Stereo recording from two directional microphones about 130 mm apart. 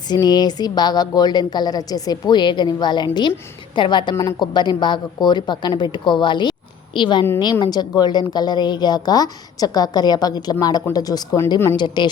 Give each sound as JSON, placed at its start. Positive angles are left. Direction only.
{"t": 0.1, "sound": "a woman's voice", "side_deg": 30}
{"t": 4.1, "sound": "a woman's voice", "side_deg": 25}